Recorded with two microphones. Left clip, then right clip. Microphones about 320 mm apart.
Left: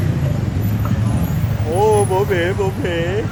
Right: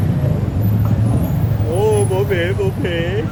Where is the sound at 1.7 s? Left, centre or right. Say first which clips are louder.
Left 2 dB; centre.